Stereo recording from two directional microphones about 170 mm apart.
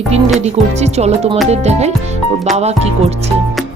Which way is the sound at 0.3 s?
40° right (ahead or behind).